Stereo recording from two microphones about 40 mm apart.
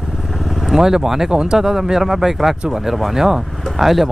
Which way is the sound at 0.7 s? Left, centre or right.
Centre.